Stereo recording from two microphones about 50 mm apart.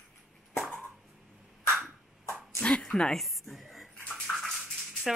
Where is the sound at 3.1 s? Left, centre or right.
Centre.